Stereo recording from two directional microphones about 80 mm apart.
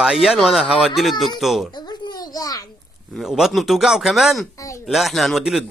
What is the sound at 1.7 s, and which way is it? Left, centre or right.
Babbling, left.